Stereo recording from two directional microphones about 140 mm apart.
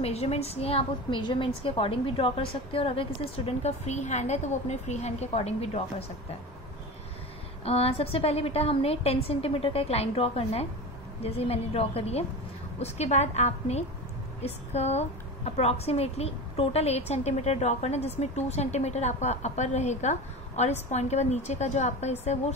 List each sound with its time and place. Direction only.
0.0 s a woman's voice: 45° left (ahead or behind)
7.6 s a woman's voice: 45° left (ahead or behind)